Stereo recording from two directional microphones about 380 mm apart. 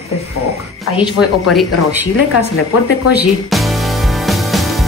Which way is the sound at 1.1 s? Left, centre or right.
Left.